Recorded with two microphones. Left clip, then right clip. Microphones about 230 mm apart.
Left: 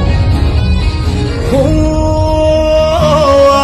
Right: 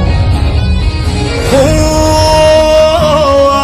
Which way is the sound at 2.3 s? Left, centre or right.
Right.